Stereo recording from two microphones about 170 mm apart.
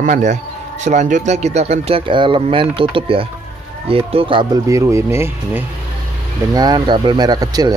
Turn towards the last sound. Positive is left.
turn(degrees=-25)  # may be behind; listen again after turning